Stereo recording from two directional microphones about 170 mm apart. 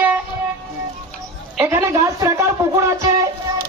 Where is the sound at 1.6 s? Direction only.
15° right (ahead or behind).